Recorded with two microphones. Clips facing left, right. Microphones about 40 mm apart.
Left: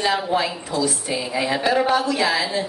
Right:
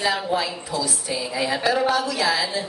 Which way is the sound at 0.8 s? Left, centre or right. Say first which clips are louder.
Left 3 dB; left.